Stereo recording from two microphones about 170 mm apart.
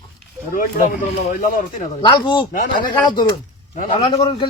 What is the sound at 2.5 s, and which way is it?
Speech, 50° left (ahead or behind).